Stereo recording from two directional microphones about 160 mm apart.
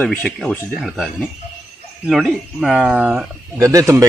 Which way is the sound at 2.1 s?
5° right (ahead or behind).